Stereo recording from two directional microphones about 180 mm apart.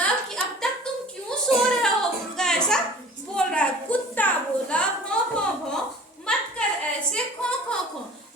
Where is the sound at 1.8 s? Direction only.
5° left (ahead or behind).